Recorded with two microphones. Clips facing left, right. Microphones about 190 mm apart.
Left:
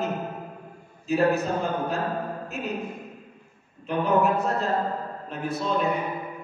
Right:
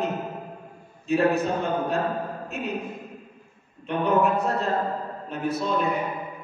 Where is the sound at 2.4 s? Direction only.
Centre (ahead or behind).